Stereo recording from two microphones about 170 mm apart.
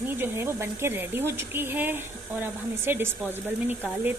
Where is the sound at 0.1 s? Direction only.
15° right (ahead or behind).